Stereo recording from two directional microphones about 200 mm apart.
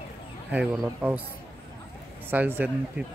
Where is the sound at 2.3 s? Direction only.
10° right (ahead or behind).